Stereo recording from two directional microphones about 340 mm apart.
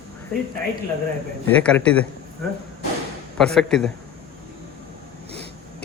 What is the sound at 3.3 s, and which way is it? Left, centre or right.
Speech, centre.